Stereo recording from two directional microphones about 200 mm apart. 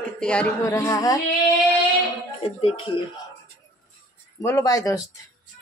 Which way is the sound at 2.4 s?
30° left (ahead or behind).